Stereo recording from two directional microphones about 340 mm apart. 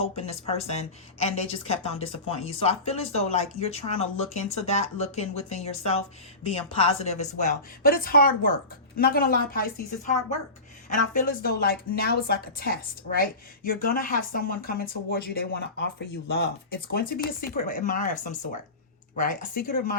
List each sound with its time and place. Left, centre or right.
0.0 s a woman's voice: centre